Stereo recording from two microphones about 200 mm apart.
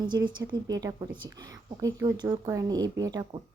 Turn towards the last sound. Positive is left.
turn(degrees=-20)  # may be behind; listen again after turning